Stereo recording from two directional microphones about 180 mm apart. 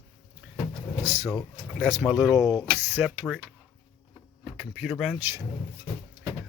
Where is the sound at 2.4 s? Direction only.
20° left (ahead or behind).